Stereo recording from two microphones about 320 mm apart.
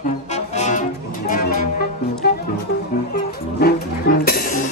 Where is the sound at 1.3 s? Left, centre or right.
Left.